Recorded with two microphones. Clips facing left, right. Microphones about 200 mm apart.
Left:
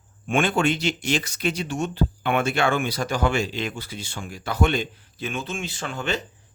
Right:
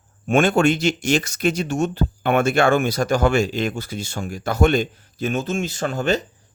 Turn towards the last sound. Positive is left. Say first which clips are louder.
# right 7 dB
turn(degrees=-40)  # may be behind; listen again after turning